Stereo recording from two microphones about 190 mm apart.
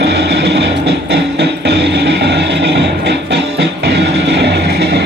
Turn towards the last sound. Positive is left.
turn(degrees=-60)  # may be behind; listen again after turning